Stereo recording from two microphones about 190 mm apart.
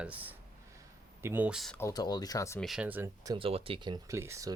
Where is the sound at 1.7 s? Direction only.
15° left (ahead or behind).